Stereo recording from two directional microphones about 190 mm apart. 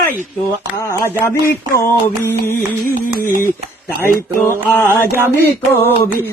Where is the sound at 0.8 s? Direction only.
15° left (ahead or behind).